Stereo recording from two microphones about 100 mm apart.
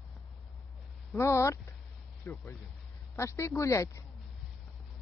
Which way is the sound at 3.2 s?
30° left (ahead or behind).